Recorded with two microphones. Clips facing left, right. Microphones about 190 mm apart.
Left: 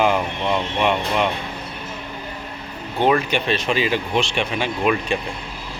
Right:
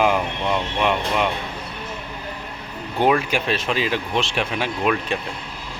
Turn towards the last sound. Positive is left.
turn(degrees=0)  # may be behind; listen again after turning